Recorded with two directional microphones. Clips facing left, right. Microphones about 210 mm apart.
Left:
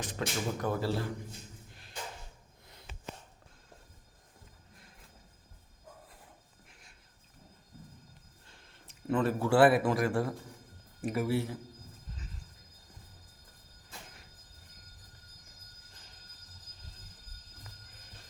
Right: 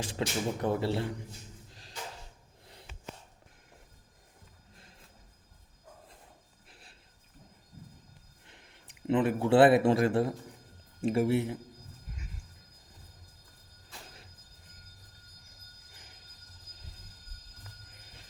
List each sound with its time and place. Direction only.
0.0 s speech: 30° right (ahead or behind)
6.7 s a sound: 35° right (ahead or behind)
8.4 s a man's voice: 15° right (ahead or behind)